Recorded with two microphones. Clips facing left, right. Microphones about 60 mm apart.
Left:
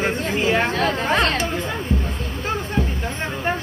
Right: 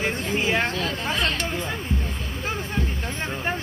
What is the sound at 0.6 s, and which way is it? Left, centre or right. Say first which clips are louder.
Speech: left 5 dB; left.